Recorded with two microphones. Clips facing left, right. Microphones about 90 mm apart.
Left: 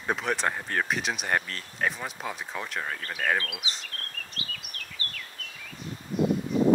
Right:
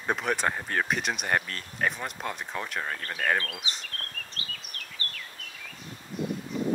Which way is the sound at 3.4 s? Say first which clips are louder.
Even; 35° right (ahead or behind).